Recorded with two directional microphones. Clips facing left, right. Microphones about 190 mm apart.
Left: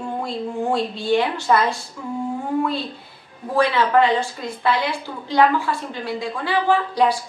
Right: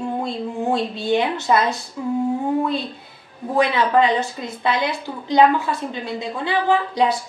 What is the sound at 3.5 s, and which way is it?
Speech, 20° right (ahead or behind).